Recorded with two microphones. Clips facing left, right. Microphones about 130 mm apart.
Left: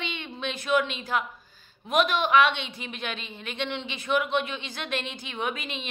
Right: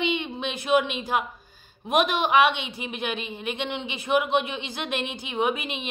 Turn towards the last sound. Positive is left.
turn(degrees=-15)  # may be behind; listen again after turning